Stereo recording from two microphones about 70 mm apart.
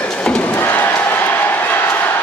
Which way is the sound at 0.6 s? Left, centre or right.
Left.